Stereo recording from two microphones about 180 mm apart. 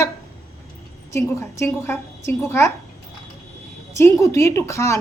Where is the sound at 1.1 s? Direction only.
15° left (ahead or behind).